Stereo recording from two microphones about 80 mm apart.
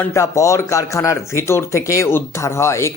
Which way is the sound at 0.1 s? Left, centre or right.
Left.